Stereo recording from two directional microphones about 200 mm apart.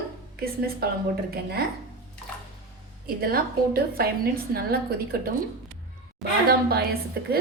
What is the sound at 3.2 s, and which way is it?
A woman's voice, 50° right (ahead or behind).